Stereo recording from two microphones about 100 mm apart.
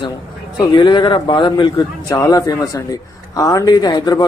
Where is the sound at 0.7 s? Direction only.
50° left (ahead or behind).